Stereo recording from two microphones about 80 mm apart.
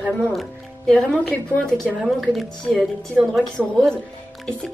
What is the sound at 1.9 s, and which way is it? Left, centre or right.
A woman's voice, centre.